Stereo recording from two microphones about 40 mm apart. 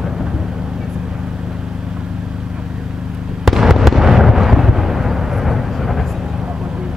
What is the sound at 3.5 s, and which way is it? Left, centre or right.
Fireworks, centre.